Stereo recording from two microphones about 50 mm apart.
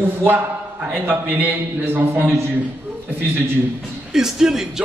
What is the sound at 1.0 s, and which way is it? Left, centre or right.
Speech, right.